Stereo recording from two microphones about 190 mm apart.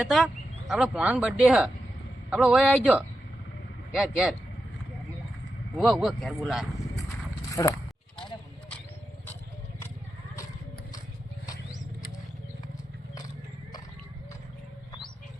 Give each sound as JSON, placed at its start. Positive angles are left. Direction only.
{"t": 0.0, "sound": "speech", "side_deg": 0}
{"t": 3.9, "sound": "speech", "side_deg": -5}
{"t": 5.7, "sound": "speech", "side_deg": 0}
{"t": 7.5, "sound": "speech", "side_deg": 15}